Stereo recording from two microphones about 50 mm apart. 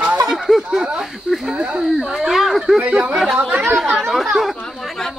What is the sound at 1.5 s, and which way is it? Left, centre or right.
Speech, centre.